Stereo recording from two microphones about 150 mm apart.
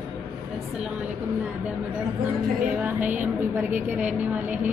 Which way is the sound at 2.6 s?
10° right (ahead or behind).